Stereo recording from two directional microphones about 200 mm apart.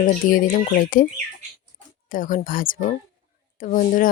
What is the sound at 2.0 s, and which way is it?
Speech, 40° left (ahead or behind).